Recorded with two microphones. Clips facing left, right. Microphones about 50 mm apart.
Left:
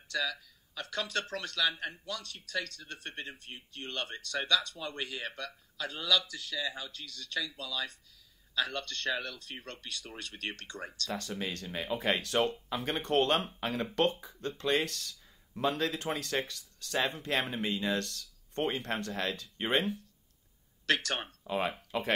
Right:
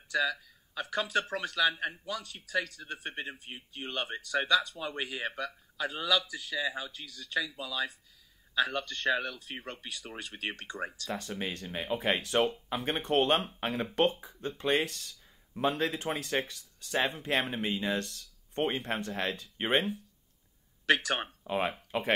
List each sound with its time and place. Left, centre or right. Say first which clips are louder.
0.1 s speech: right 4 dB; centre
14.1 s speech: even; centre
14.6 s speech: right 1 dB; centre
20.8 s speech: right 3 dB; centre